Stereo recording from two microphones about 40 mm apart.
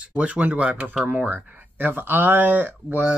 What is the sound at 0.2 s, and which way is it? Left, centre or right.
Speech, right.